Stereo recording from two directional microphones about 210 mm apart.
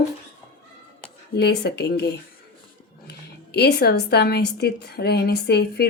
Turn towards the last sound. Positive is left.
turn(degrees=50)  # may be behind; listen again after turning